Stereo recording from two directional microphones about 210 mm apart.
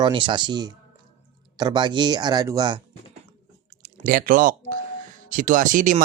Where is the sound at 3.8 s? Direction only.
40° right (ahead or behind).